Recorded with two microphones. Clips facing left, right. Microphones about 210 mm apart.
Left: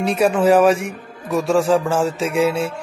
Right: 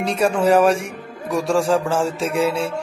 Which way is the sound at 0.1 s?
5° left (ahead or behind).